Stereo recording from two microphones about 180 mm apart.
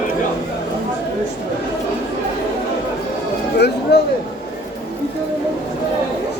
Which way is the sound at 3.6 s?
65° left (ahead or behind).